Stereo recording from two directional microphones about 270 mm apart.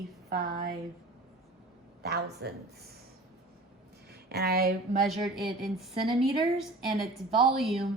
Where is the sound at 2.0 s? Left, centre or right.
Right.